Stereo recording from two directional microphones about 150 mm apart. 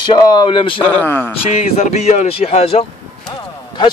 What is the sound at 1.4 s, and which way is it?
Speech, 45° left (ahead or behind).